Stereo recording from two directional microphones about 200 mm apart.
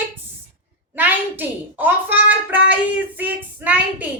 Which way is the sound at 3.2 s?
10° right (ahead or behind).